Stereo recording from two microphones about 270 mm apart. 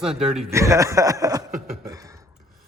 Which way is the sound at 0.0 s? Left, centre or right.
Centre.